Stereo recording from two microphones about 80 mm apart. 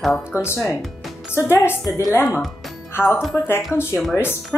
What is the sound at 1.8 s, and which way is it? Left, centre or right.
Speech, left.